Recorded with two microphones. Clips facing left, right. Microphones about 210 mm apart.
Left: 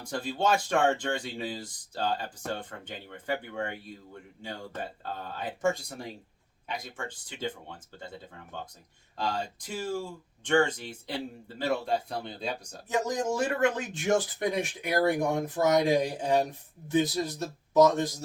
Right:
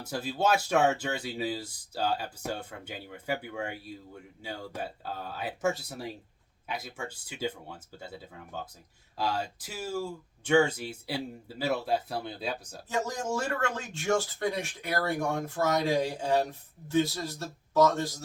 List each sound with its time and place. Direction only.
0.0 s speech: 5° right (ahead or behind)
12.9 s speech: 15° left (ahead or behind)